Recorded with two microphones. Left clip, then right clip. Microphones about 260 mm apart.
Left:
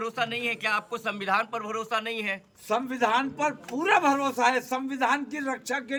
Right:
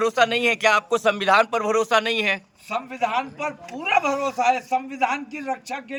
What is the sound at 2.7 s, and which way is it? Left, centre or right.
A man's voice, centre.